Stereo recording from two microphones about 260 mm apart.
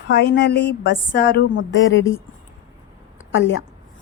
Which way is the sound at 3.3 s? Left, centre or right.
Left.